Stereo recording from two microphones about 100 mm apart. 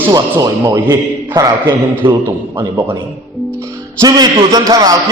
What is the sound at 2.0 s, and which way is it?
Speech, 55° right (ahead or behind).